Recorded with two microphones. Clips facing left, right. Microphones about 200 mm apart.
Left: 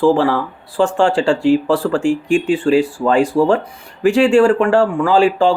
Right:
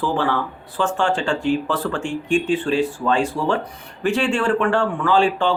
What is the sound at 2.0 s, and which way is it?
Speech, 90° left.